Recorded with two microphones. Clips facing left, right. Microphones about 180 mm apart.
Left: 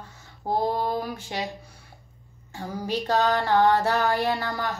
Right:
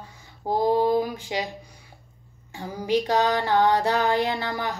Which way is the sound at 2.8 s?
15° right (ahead or behind).